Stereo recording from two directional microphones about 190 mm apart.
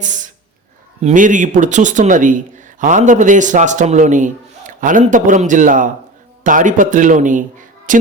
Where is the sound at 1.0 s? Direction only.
40° right (ahead or behind).